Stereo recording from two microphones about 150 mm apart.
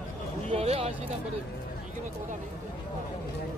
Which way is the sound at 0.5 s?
40° right (ahead or behind).